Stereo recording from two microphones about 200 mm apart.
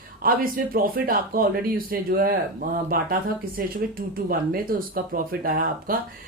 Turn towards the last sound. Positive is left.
turn(degrees=-45)  # may be behind; listen again after turning